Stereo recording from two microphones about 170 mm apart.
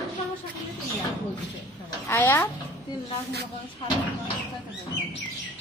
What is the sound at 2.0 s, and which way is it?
Speech, 10° left (ahead or behind).